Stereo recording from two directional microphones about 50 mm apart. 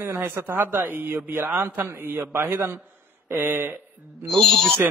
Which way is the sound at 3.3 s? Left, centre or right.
Right.